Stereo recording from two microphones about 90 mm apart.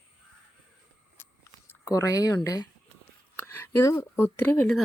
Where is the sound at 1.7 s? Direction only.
35° left (ahead or behind).